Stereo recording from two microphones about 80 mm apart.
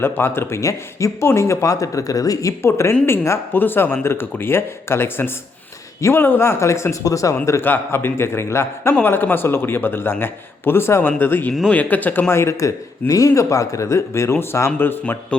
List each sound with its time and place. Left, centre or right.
0.0 s speech: left
0.6 s a man's voice: left
7.6 s a man's voice: left
9.0 s speech: left
12.3 s a man's voice: left